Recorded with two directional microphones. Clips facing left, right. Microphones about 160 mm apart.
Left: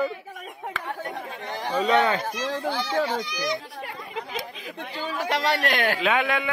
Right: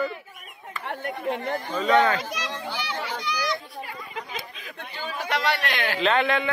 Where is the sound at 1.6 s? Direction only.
90° left.